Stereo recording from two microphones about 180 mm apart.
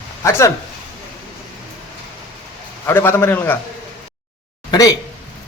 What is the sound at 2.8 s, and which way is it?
Speech, 15° left (ahead or behind).